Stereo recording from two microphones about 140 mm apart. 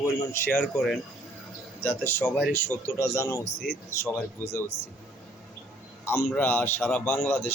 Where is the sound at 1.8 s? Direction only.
15° left (ahead or behind).